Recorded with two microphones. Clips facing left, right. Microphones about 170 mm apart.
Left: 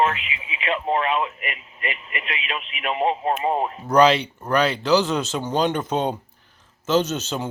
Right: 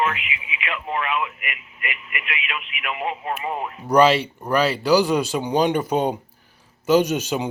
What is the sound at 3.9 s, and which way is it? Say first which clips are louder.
Speech: right 1 dB; 5° right (ahead or behind).